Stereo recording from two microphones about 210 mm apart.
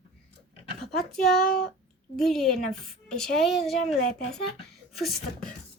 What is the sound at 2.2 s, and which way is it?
A woman's voice, centre (ahead or behind).